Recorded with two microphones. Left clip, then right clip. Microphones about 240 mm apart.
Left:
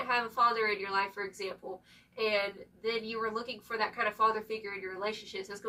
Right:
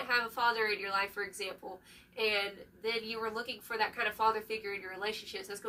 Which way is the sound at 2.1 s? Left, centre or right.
Centre.